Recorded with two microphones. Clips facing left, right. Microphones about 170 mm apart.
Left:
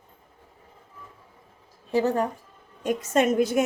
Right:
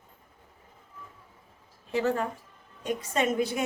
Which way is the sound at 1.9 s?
35° left (ahead or behind).